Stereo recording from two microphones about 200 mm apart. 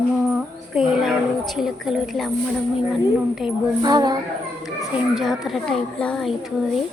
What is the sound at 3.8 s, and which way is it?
Speech, 20° right (ahead or behind).